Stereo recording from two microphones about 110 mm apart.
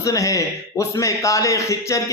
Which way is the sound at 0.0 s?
30° left (ahead or behind).